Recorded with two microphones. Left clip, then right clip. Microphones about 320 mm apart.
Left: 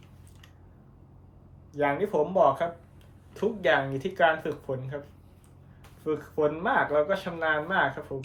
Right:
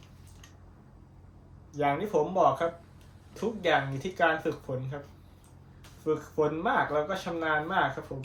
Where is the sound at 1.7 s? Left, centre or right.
Centre.